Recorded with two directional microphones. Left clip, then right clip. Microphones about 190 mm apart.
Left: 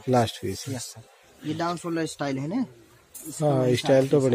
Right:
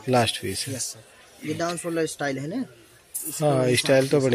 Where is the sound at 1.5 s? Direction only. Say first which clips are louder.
Right 2 dB; 50° left (ahead or behind).